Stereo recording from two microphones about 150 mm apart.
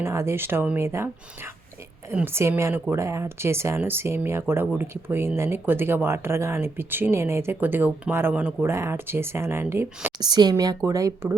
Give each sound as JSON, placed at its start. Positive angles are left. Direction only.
{"t": 0.0, "sound": "speech", "side_deg": -15}
{"t": 10.2, "sound": "speech", "side_deg": -30}